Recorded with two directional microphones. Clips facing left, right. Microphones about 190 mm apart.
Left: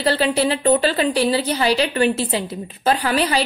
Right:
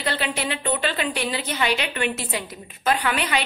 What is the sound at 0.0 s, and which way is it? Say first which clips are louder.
A woman's voice: left 8 dB; 35° left (ahead or behind).